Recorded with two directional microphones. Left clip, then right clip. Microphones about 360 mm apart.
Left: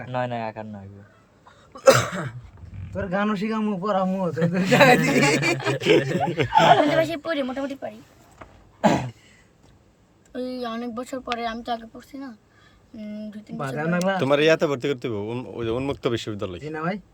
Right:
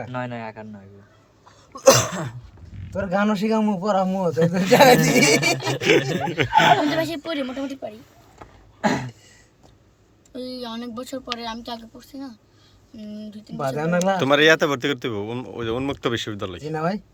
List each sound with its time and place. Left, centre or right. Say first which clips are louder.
0.1 s a man's voice: left 3 dB; left
1.7 s a man's voice: right 1 dB; right
6.1 s speech: right 1 dB; centre
8.8 s a sound: left 2 dB; left
10.3 s speech: left 2 dB; centre
13.6 s a man's voice: right 3 dB; right
14.2 s speech: right 3 dB; centre
16.7 s a man's voice: right 4 dB; right